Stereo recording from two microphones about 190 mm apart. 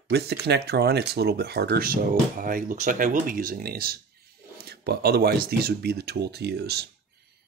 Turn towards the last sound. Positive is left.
turn(degrees=-60)  # may be behind; listen again after turning